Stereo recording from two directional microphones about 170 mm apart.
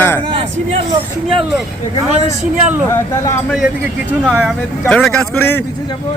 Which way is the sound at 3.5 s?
Centre (ahead or behind).